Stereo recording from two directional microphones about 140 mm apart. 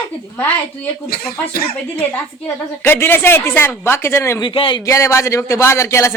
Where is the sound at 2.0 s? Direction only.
10° left (ahead or behind).